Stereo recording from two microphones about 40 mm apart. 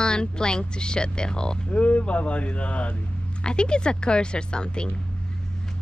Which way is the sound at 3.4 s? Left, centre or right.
Left.